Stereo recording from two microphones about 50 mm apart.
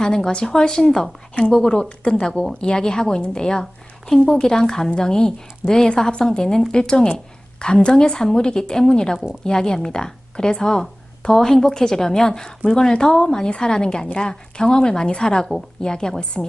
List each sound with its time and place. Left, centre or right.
0.0 s speech: centre